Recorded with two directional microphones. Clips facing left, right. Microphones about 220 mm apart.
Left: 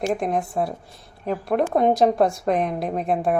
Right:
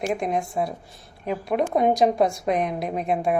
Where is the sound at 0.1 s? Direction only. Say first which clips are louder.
Left 2 dB; centre (ahead or behind).